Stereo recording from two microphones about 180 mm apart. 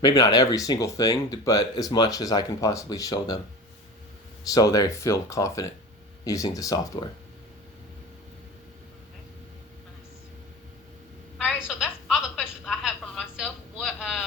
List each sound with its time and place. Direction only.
0.0 s speech: 20° left (ahead or behind)
4.4 s speech: 20° left (ahead or behind)
11.4 s telephone: centre (ahead or behind)